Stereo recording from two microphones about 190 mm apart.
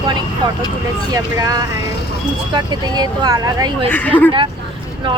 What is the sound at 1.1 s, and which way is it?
Speech, 20° right (ahead or behind).